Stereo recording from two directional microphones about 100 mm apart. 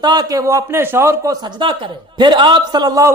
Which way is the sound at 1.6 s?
50° right (ahead or behind).